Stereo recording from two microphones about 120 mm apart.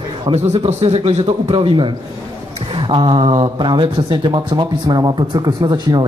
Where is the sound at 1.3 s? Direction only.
50° right (ahead or behind).